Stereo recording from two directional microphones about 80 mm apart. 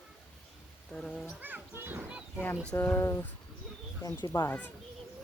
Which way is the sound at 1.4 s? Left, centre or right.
Right.